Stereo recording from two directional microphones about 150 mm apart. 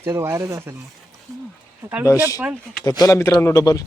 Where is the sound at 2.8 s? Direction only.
25° left (ahead or behind).